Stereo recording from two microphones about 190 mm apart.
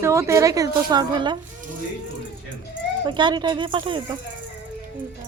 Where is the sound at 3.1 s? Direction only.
25° right (ahead or behind).